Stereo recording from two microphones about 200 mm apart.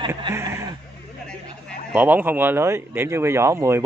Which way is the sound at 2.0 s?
10° right (ahead or behind).